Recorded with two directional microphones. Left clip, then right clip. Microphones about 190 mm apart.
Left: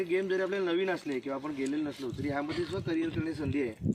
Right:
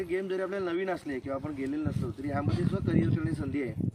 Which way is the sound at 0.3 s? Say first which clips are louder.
Left 2 dB; centre (ahead or behind).